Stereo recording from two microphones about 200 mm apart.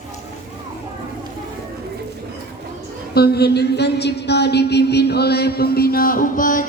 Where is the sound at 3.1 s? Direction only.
50° left (ahead or behind).